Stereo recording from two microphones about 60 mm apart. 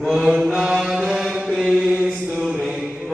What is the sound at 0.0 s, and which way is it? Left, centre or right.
Mantra, centre.